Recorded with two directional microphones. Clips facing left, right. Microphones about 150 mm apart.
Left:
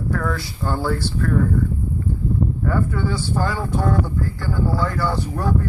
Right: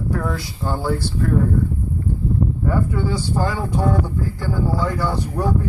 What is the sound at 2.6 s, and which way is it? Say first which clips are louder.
Speech: right 1 dB; 15° right (ahead or behind).